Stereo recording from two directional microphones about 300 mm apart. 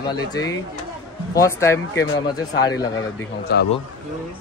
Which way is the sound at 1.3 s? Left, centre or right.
Centre.